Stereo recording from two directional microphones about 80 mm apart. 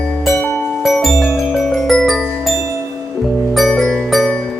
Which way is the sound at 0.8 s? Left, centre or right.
Centre.